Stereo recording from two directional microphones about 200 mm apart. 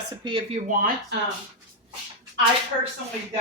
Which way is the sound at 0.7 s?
45° right (ahead or behind).